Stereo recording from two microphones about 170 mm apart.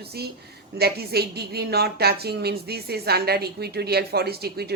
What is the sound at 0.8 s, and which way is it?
A woman's voice, 70° right (ahead or behind).